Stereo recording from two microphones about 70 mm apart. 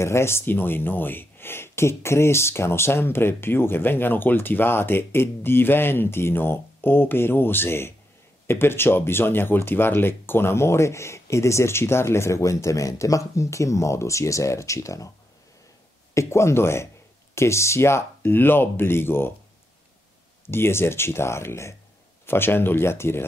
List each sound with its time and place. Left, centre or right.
0.0 s speech: left
16.2 s speech: left
20.4 s speech: left